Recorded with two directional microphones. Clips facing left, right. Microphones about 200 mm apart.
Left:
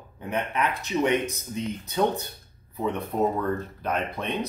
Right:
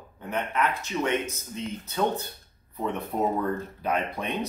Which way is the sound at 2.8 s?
5° right (ahead or behind).